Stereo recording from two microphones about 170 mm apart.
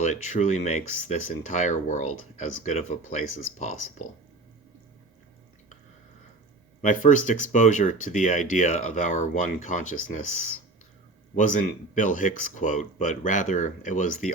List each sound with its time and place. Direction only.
0.0 s speech: 45° left (ahead or behind)
6.8 s speech: 50° left (ahead or behind)
11.3 s speech: 50° left (ahead or behind)